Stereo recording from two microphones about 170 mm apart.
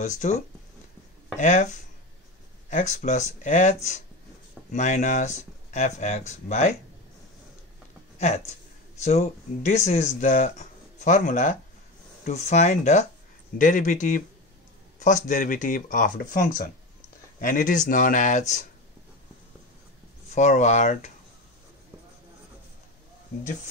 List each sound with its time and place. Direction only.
0.0 s speech: 45° left (ahead or behind)
1.4 s speech: 45° left (ahead or behind)
8.2 s speech: 40° left (ahead or behind)
20.2 s speech: 45° left (ahead or behind)